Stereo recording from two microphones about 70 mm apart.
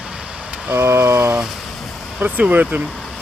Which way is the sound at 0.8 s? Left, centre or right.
Right.